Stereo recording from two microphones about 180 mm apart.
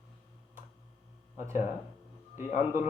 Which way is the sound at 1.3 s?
15° right (ahead or behind).